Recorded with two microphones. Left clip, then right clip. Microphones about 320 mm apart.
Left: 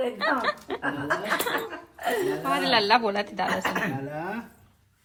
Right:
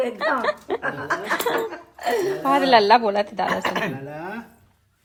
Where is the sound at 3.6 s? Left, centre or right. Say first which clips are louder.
Right 3 dB; right.